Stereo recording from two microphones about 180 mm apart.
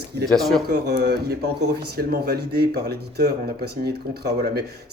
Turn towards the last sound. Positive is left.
turn(degrees=-60)  # may be behind; listen again after turning